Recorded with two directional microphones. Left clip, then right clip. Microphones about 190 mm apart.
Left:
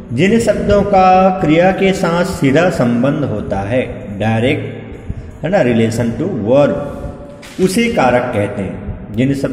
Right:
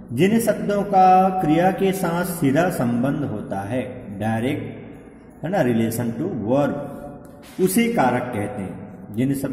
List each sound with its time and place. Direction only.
0.1 s a man's voice: 10° right (ahead or behind)